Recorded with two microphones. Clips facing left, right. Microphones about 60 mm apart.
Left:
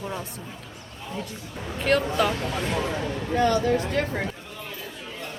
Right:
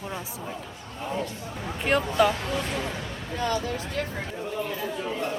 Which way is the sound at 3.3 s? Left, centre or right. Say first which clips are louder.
Left 6 dB; left.